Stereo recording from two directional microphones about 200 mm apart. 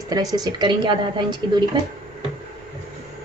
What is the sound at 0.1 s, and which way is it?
A woman's voice, 20° right (ahead or behind).